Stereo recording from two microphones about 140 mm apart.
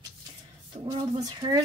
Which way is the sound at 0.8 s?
30° right (ahead or behind).